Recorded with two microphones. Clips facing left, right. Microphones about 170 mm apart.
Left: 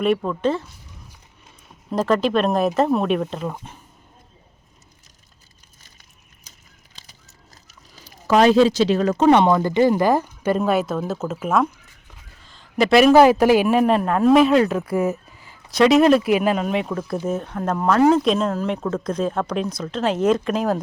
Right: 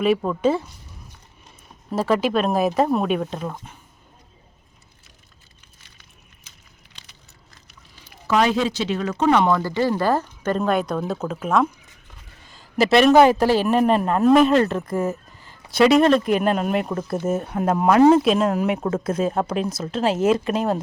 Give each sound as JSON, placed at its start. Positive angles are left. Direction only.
{"t": 0.0, "sound": "speech", "side_deg": -5}
{"t": 5.8, "sound": "a sound", "side_deg": 45}
{"t": 9.3, "sound": "a man's voice", "side_deg": 20}